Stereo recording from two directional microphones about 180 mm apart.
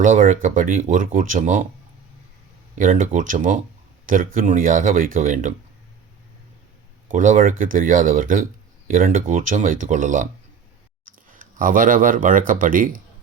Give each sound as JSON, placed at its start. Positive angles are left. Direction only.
{"t": 0.0, "sound": "speech", "side_deg": -45}
{"t": 2.7, "sound": "speech", "side_deg": -45}
{"t": 7.1, "sound": "speech", "side_deg": -45}
{"t": 11.3, "sound": "speech", "side_deg": -45}